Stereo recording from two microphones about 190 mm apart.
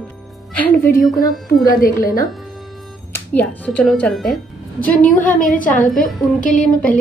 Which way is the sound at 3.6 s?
5° left (ahead or behind).